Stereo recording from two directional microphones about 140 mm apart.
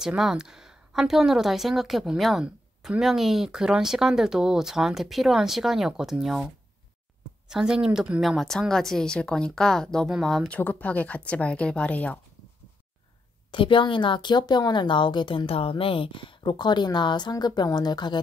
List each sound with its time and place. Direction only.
0.0 s speech: 5° right (ahead or behind)
7.4 s speech: 5° right (ahead or behind)
13.5 s speech: 35° left (ahead or behind)